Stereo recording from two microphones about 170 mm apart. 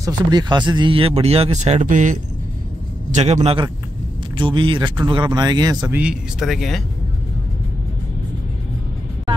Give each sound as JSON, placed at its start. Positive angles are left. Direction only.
{"t": 0.0, "sound": "speech", "side_deg": -25}
{"t": 5.9, "sound": "speech", "side_deg": -5}